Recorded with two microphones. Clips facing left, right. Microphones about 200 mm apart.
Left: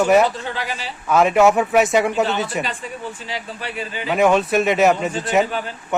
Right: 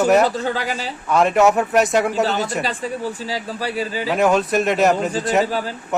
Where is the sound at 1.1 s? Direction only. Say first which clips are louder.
Left 1 dB; centre (ahead or behind).